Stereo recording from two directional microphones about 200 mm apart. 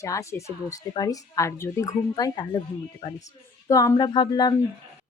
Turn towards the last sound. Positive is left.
turn(degrees=20)  # may be behind; listen again after turning